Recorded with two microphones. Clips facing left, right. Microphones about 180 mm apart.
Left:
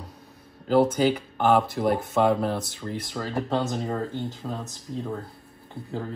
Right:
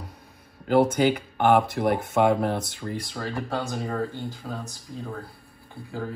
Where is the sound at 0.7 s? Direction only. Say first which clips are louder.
Even; centre (ahead or behind).